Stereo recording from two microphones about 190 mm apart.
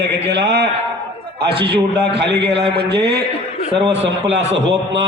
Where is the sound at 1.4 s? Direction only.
30° right (ahead or behind).